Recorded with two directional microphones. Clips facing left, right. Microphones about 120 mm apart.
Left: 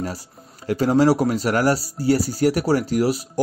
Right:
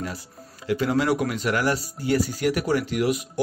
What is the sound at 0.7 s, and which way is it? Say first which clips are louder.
Speech: left 5 dB; 35° left (ahead or behind).